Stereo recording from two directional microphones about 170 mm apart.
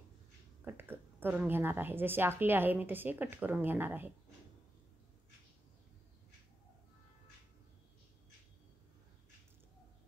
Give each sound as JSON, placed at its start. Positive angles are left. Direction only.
{"t": 0.7, "sound": "a woman's voice", "side_deg": -10}